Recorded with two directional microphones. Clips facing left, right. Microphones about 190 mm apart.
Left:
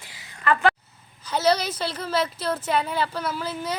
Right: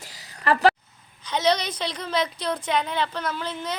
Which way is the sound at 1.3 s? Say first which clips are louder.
Left 1 dB; 5° left (ahead or behind).